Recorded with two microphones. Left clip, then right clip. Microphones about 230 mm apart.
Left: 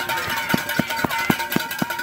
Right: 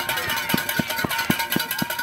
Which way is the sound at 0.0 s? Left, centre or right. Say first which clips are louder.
Left 1 dB; right.